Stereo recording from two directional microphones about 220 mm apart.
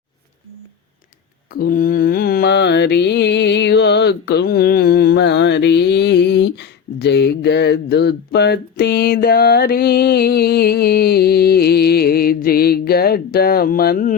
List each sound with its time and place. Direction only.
1.5 s mantra: 40° left (ahead or behind)